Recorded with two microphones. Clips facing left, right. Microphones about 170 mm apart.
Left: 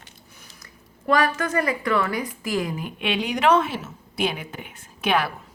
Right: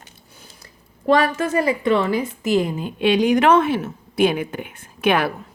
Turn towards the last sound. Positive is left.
turn(degrees=-55)  # may be behind; listen again after turning